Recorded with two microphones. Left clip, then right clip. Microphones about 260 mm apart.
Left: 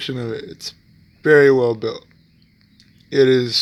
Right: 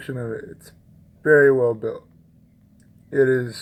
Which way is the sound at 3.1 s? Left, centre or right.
Left.